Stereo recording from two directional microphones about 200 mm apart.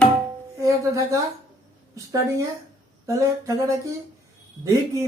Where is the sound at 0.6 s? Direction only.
15° right (ahead or behind).